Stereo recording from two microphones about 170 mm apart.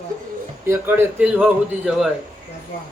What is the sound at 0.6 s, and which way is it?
A man's voice, 15° right (ahead or behind).